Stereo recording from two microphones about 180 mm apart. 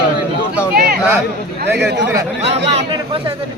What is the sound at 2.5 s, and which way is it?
Speech, 35° right (ahead or behind).